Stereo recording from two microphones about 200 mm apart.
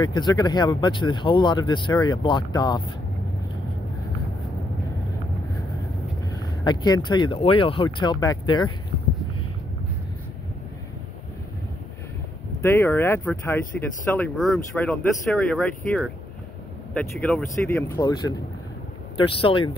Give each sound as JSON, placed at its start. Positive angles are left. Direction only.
{"t": 0.0, "sound": "speech", "side_deg": 20}
{"t": 6.3, "sound": "speech", "side_deg": 20}
{"t": 12.6, "sound": "speech", "side_deg": 10}